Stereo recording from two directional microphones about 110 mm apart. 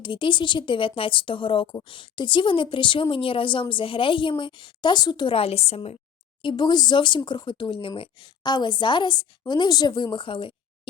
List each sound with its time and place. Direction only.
0.0 s a woman's voice: 50° left (ahead or behind); by 6.0 s 65° left (ahead or behind)
6.4 s a woman's voice: 45° left (ahead or behind)